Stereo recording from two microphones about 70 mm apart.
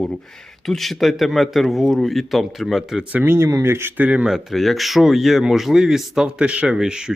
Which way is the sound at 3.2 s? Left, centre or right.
Right.